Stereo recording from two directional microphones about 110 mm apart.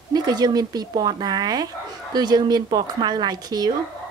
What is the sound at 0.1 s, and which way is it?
Speech, 40° right (ahead or behind).